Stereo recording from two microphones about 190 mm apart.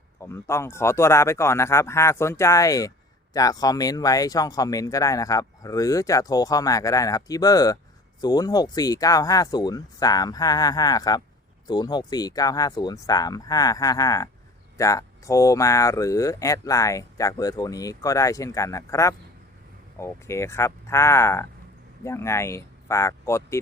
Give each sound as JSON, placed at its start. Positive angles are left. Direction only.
{"t": 0.2, "sound": "speech", "side_deg": 15}